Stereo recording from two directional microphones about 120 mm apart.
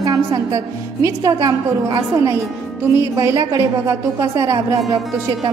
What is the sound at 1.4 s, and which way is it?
A woman's voice, 30° right (ahead or behind).